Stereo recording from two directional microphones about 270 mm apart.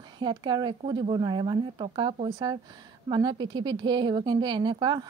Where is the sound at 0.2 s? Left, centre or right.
Centre.